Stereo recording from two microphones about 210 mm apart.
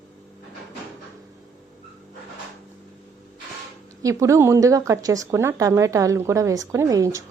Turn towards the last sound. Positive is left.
turn(degrees=-15)  # may be behind; listen again after turning